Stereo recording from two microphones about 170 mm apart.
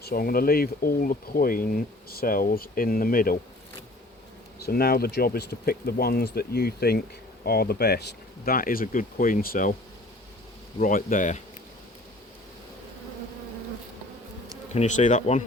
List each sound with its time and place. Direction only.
0.0 s speech: 60° left (ahead or behind)
4.6 s speech: 65° left (ahead or behind)
8.4 s speech: 55° left (ahead or behind)
10.8 s speech: 50° left (ahead or behind)
14.7 s speech: 45° left (ahead or behind)